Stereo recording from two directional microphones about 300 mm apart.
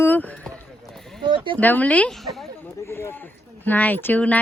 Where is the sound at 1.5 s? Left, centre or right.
Centre.